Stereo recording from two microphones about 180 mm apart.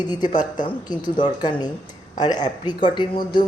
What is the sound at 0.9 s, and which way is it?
A man's voice, 25° left (ahead or behind).